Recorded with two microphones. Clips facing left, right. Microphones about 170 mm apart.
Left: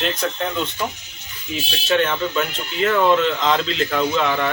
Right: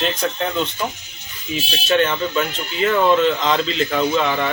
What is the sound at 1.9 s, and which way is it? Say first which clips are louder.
Speech: right 1 dB; centre (ahead or behind).